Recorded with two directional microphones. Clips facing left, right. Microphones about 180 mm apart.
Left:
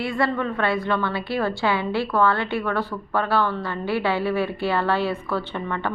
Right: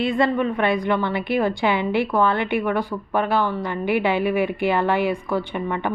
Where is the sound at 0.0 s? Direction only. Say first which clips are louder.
Right 4 dB; 20° right (ahead or behind).